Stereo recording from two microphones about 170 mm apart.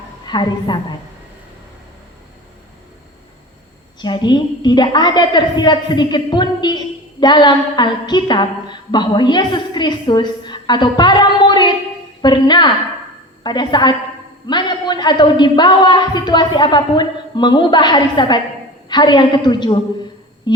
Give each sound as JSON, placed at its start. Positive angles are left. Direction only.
{"t": 0.3, "sound": "a woman's voice", "side_deg": 25}
{"t": 4.0, "sound": "a woman's voice", "side_deg": 25}